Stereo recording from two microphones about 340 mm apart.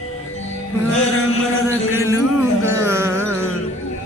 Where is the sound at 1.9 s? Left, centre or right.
Centre.